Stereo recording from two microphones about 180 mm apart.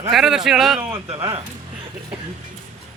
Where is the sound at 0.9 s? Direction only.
30° right (ahead or behind).